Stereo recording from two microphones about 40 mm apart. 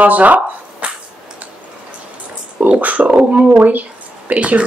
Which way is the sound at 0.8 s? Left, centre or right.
Right.